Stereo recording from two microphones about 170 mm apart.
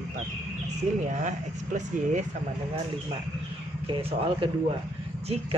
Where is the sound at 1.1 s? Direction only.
45° right (ahead or behind).